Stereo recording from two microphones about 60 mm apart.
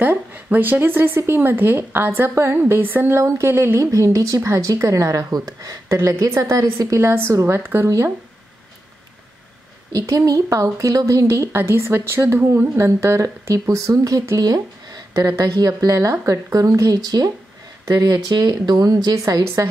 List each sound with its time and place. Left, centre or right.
0.0 s a woman's voice: right
3.2 s a woman's voice: right
5.9 s speech: right
7.0 s a woman's voice: right
9.9 s speech: right
11.6 s a woman's voice: right
12.7 s speech: right
14.3 s speech: right
15.1 s speech: right
19.4 s a woman's voice: right